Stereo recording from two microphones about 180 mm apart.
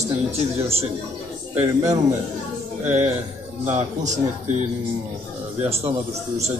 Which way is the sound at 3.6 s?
40° right (ahead or behind).